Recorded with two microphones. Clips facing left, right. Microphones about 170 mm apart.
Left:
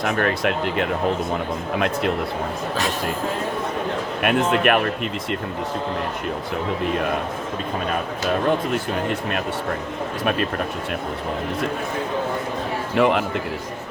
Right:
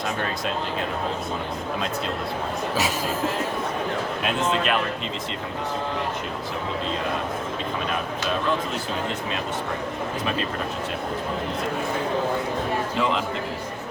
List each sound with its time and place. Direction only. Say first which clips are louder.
0.0 s speech: left 6 dB; 70° left (ahead or behind)
4.2 s speech: left 7 dB; 60° left (ahead or behind)
8.4 s speech: left 5 dB; 60° left (ahead or behind)
13.0 s speech: left 8 dB; 60° left (ahead or behind)